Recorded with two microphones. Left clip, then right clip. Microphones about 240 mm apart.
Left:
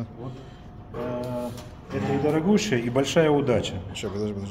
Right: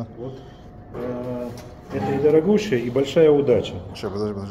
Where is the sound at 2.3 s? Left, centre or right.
Left.